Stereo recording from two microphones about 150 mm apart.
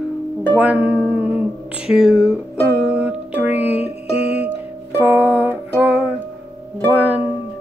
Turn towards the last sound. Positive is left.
turn(degrees=-10)  # may be behind; listen again after turning